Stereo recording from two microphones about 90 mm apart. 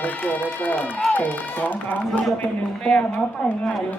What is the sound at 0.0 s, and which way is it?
A woman's voice, 20° left (ahead or behind).